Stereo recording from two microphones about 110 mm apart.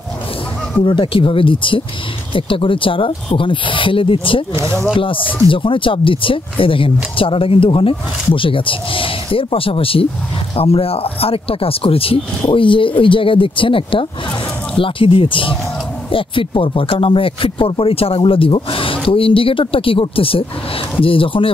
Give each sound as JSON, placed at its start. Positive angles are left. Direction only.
{"t": 0.8, "sound": "speech", "side_deg": 50}